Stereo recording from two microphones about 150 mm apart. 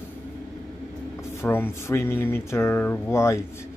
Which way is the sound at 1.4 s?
15° left (ahead or behind).